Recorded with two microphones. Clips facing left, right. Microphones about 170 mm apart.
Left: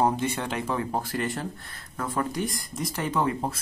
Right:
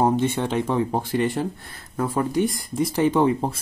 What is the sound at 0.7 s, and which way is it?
Speech, 25° right (ahead or behind).